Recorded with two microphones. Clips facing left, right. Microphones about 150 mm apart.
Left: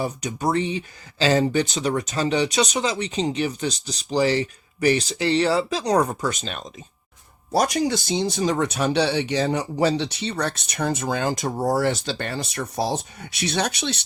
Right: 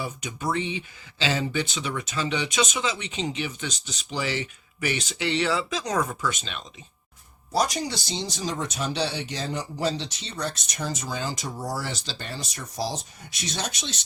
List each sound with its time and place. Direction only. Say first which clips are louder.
0.0 s speech: left 6 dB; 40° left (ahead or behind)
7.5 s speech: left 5 dB; 55° left (ahead or behind)